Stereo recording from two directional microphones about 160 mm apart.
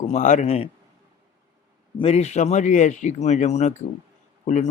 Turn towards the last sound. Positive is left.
turn(degrees=50)  # may be behind; listen again after turning